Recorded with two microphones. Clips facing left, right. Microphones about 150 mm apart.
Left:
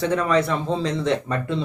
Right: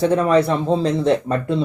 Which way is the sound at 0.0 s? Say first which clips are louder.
Right 5 dB; 35° right (ahead or behind).